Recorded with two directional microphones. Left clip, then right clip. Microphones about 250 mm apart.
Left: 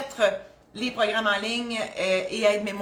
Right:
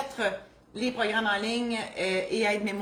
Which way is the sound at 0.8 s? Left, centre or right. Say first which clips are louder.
Left 3 dB; centre.